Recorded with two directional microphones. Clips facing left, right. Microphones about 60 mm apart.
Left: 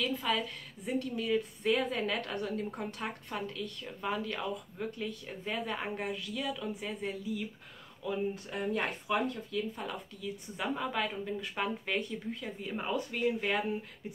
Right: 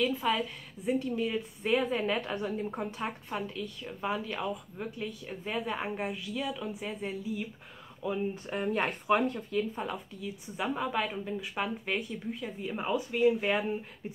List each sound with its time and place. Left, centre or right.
0.0 s a woman's voice: centre
8.5 s speech: right
9.8 s a woman's voice: centre